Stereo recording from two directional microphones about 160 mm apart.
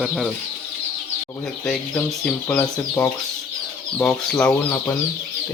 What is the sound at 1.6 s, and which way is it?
Speech, 5° left (ahead or behind).